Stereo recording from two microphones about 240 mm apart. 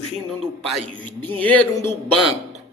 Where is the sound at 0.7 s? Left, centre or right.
Centre.